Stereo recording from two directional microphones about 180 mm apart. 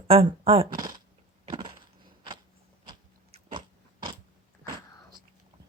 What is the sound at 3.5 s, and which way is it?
Biting, 25° right (ahead or behind).